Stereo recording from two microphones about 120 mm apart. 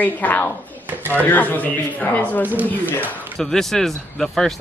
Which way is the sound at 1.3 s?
15° left (ahead or behind).